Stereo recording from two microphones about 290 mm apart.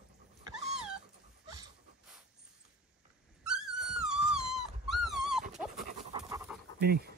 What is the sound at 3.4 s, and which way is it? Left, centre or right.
Dog, centre.